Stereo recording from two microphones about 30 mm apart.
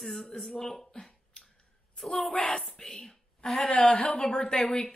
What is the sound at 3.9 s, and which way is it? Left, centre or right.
Speech, left.